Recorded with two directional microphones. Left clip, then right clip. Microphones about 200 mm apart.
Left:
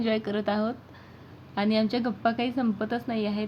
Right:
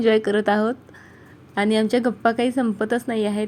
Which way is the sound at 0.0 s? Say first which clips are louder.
Right 10 dB; 35° right (ahead or behind).